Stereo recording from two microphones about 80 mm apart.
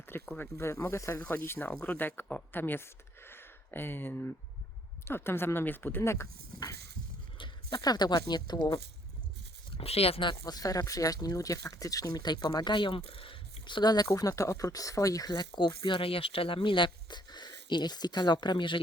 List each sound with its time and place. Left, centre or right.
0.1 s speech: left
1.2 s speech: left
6.0 s speech: left
7.3 s horse: left
7.8 s speech: left
10.4 s speech: left
15.3 s speech: left
16.5 s speech: left